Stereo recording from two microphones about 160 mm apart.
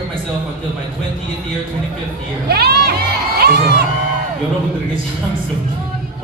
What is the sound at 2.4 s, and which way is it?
Crowd, 85° right.